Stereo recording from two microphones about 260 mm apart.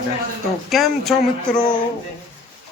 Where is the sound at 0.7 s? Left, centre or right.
Centre.